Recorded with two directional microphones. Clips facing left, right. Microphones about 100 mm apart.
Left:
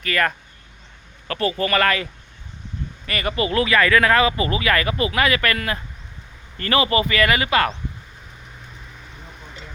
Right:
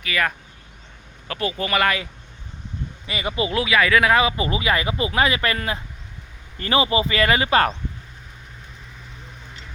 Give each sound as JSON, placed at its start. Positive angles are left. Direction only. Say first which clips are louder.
{"t": 0.0, "sound": "speech", "louder": "left 2 dB", "side_deg": -5}
{"t": 3.1, "sound": "speech", "louder": "left 2 dB", "side_deg": -10}